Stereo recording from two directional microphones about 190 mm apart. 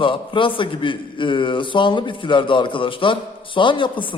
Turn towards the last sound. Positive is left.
turn(degrees=25)  # may be behind; listen again after turning